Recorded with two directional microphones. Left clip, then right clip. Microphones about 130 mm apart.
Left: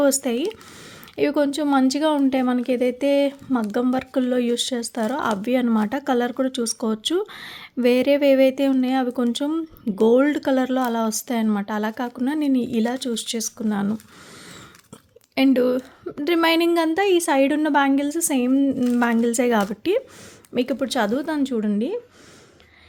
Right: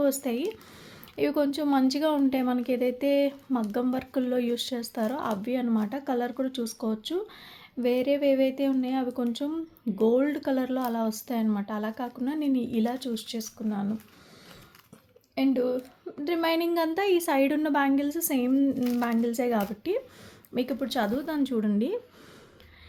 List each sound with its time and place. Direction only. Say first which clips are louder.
0.0 s a woman's voice: left 7 dB; 50° left (ahead or behind); by 13.9 s 70° left (ahead or behind)
15.4 s a woman's voice: left 8 dB; 80° left; by 18.8 s 35° left (ahead or behind)
18.9 s speech: left 7 dB; 50° left (ahead or behind)
20.5 s a woman's voice: left 7 dB; 50° left (ahead or behind); by 21.9 s 25° left (ahead or behind)